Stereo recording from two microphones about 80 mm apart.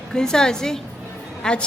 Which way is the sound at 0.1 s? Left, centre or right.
Centre.